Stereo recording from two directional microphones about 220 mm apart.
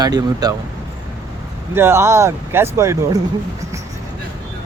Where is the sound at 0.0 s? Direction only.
15° right (ahead or behind).